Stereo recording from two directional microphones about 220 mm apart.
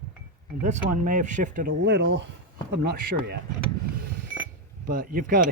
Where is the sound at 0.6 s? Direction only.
35° right (ahead or behind).